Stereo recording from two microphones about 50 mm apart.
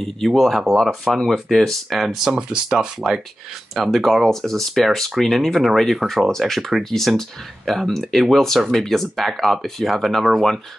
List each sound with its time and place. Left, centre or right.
0.3 s speech: centre
3.7 s speech: centre